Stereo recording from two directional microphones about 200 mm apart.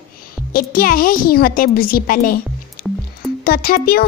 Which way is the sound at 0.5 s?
45° left (ahead or behind).